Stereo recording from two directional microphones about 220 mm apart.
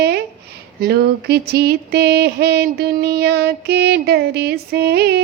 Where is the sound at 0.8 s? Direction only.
45° right (ahead or behind).